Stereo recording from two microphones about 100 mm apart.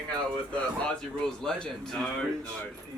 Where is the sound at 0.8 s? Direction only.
10° left (ahead or behind).